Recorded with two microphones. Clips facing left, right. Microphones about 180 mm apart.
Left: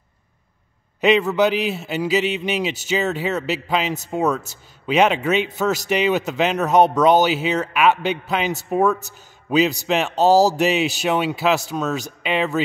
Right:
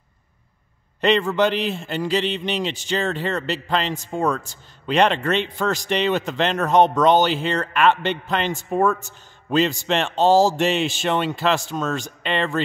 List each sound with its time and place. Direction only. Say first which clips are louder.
1.0 s speech: left 2 dB; 5° left (ahead or behind)
10.3 s speech: left 1 dB; 40° left (ahead or behind)
10.6 s speech: left 2 dB; 5° left (ahead or behind)